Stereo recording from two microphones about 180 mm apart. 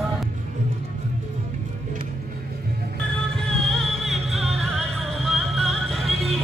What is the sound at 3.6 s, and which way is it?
Music, centre (ahead or behind).